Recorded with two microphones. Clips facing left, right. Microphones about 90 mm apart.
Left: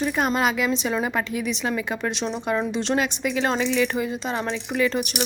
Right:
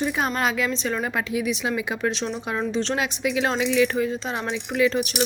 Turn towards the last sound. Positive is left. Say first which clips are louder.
# right 2 dB
turn(degrees=0)  # may be behind; listen again after turning